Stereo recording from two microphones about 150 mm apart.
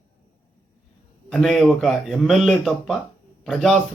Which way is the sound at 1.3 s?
Centre (ahead or behind).